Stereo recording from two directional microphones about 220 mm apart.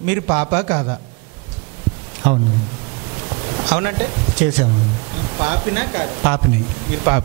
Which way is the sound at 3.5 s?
25° right (ahead or behind).